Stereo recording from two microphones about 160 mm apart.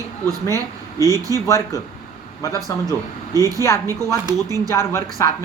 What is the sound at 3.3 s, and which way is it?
Speech, 20° right (ahead or behind).